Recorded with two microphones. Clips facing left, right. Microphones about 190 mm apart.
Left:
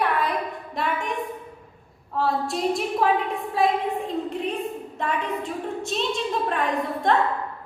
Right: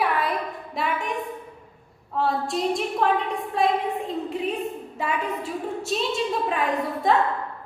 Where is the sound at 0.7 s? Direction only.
Centre (ahead or behind).